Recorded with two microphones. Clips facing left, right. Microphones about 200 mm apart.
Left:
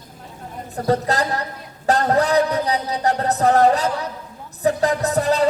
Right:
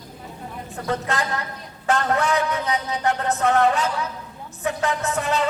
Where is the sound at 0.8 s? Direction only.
35° left (ahead or behind).